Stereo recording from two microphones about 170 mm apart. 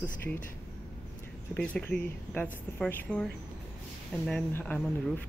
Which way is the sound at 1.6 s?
10° left (ahead or behind).